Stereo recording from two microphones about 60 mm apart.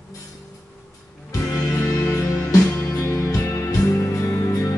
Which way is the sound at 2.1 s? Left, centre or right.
Left.